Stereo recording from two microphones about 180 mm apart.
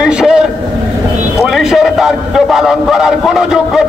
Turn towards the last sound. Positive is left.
turn(degrees=-5)  # may be behind; listen again after turning